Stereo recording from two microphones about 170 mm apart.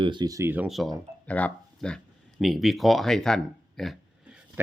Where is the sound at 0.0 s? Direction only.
25° right (ahead or behind).